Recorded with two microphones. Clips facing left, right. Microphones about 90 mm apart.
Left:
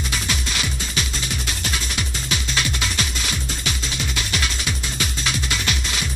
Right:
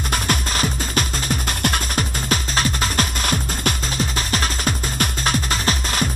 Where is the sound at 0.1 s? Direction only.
45° right (ahead or behind).